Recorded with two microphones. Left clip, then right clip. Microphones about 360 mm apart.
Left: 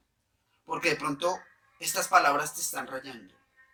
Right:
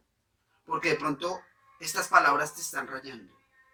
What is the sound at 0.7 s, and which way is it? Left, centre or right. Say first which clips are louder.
Speech: right 1 dB; centre.